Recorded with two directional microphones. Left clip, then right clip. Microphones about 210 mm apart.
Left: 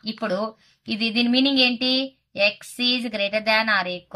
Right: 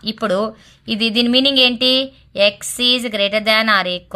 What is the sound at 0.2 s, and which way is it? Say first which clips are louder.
A woman's voice: right 7 dB; 40° right (ahead or behind).